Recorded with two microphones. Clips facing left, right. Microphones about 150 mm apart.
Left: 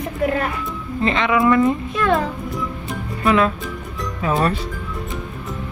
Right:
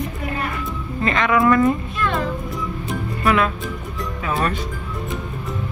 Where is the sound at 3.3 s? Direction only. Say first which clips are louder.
Left 2 dB; 30° left (ahead or behind).